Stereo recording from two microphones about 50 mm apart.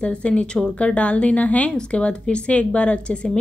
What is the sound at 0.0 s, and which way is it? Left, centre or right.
A woman's voice, left.